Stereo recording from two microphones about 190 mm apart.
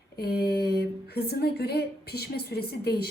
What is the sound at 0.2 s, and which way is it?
Speech, 55° left (ahead or behind).